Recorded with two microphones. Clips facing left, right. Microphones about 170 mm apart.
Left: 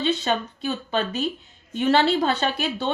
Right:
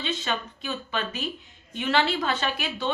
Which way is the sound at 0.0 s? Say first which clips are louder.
Left 7 dB; 35° left (ahead or behind).